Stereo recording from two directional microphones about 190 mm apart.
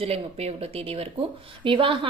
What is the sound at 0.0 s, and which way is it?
A woman's voice, 30° right (ahead or behind).